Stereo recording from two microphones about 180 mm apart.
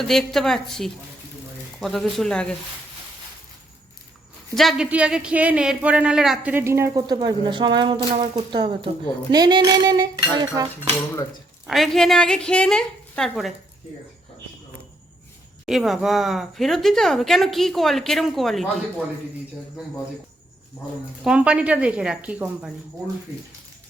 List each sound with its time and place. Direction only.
0.1 s speech: centre (ahead or behind)
4.5 s speech: centre (ahead or behind); by 8.9 s 25° right (ahead or behind)
9.3 s cutlery: 20° right (ahead or behind)
11.6 s speech: centre (ahead or behind)
15.6 s speech: centre (ahead or behind)
21.2 s speech: 5° right (ahead or behind)